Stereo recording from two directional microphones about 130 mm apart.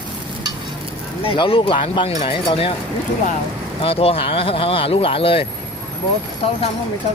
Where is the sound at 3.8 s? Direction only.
45° left (ahead or behind).